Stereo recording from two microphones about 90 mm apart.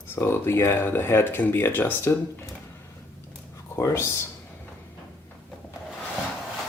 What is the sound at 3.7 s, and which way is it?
Speech, 30° left (ahead or behind).